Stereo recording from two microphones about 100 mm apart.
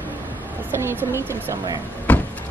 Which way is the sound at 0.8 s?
20° right (ahead or behind).